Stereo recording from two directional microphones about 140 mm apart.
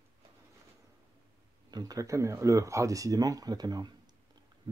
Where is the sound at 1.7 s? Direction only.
25° right (ahead or behind).